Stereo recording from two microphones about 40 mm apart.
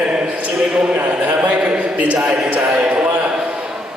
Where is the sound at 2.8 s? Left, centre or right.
Right.